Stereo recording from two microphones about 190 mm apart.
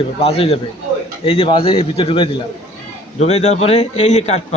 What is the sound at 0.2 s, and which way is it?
A man's voice, 30° left (ahead or behind).